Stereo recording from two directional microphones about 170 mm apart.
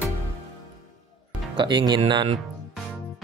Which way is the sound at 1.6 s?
25° right (ahead or behind).